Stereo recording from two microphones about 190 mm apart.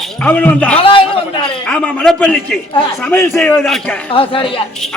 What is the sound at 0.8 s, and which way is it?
Speech, 25° left (ahead or behind).